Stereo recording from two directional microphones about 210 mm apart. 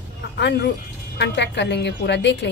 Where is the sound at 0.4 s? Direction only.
55° left (ahead or behind).